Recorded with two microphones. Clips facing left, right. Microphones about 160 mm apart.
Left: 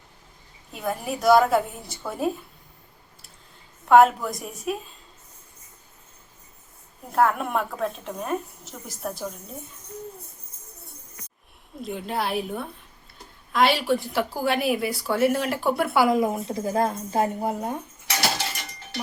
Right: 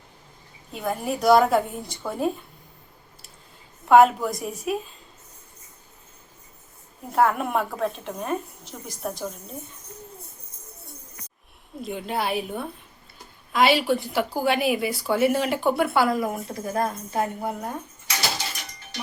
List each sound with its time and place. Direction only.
0.7 s a woman's voice: centre (ahead or behind)
3.8 s a woman's voice: centre (ahead or behind)
7.1 s a woman's voice: centre (ahead or behind)
11.8 s a woman's voice: centre (ahead or behind)
16.0 s a woman's voice: 15° left (ahead or behind)